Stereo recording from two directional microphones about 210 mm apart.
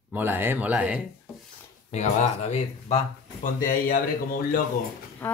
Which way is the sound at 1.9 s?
30° left (ahead or behind).